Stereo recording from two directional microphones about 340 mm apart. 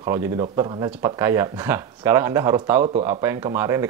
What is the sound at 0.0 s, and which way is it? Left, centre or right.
Speech, centre.